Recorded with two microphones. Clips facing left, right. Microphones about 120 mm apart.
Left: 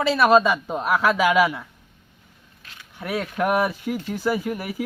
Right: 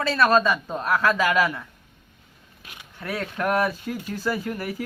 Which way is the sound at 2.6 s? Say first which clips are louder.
Right 2 dB; 10° right (ahead or behind).